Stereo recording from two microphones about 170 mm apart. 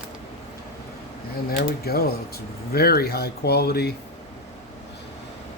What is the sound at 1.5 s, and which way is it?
Speech, 65° left (ahead or behind).